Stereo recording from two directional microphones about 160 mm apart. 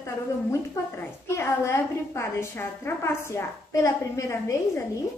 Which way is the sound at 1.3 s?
15° left (ahead or behind).